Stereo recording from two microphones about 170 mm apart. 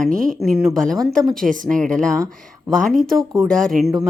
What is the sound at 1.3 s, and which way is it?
Speech, 50° right (ahead or behind).